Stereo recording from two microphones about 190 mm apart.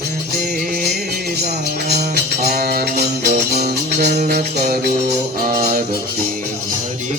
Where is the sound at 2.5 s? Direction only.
55° right (ahead or behind).